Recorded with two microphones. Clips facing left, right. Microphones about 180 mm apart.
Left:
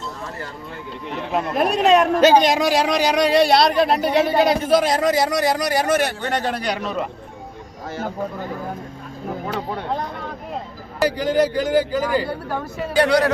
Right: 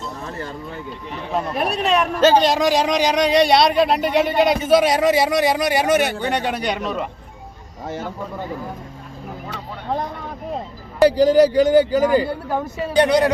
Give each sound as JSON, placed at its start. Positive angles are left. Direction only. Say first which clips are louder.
{"t": 1.8, "sound": "speech", "louder": "left 6 dB", "side_deg": 45}
{"t": 2.2, "sound": "speech", "louder": "even", "side_deg": 15}
{"t": 11.0, "sound": "speech", "louder": "right 6 dB", "side_deg": -35}
{"t": 12.5, "sound": "speech", "louder": "right 3 dB", "side_deg": -20}